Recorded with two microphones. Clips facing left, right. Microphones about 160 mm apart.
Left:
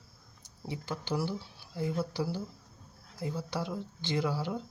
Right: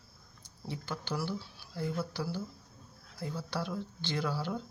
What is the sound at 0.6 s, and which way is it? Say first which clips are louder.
Speech: left 2 dB; 20° left (ahead or behind).